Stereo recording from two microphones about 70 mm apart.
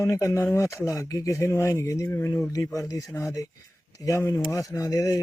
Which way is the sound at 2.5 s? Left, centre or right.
Left.